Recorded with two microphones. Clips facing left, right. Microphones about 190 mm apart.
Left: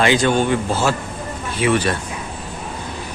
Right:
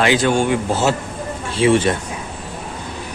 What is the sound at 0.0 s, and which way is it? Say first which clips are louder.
Speech: even; 5° right (ahead or behind).